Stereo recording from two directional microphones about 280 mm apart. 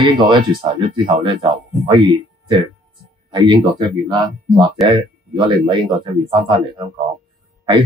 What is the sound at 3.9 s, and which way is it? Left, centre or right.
Speech, centre.